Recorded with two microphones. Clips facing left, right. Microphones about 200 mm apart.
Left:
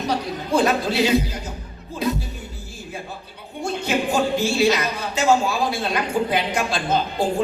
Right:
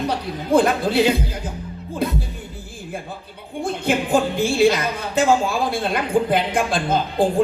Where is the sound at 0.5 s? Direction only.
55° right (ahead or behind).